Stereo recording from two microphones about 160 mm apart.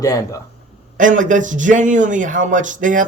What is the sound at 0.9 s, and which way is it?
Speech, 55° right (ahead or behind).